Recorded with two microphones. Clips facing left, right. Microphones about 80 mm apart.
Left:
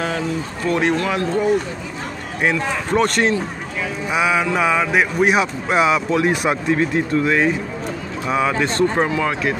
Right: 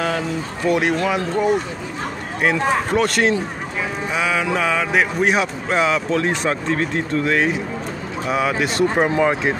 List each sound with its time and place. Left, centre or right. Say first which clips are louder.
0.7 s speech: right 1 dB; centre
2.9 s speech: left 4 dB; centre
4.1 s speech: left 3 dB; centre; by 9.6 s right